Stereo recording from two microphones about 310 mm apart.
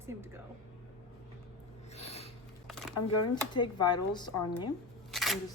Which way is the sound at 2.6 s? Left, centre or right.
Centre.